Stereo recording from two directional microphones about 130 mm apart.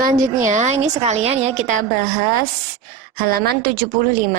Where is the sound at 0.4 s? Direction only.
65° right (ahead or behind).